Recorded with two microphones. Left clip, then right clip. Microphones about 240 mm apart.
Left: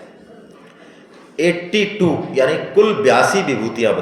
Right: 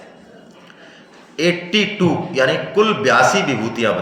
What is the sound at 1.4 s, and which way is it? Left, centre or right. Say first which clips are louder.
A man's voice: left 1 dB; right.